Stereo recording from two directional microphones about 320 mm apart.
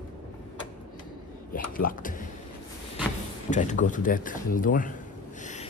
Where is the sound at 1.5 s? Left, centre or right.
Left.